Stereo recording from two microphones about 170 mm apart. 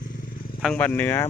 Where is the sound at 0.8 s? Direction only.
10° left (ahead or behind).